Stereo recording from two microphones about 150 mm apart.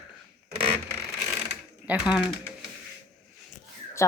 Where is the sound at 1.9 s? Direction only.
5° right (ahead or behind).